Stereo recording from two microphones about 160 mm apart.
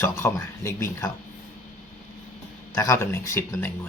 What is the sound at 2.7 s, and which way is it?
Speech, 20° left (ahead or behind).